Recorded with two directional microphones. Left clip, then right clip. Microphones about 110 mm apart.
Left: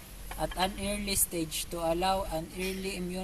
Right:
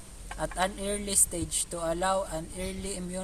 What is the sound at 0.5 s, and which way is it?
Speech, 20° right (ahead or behind).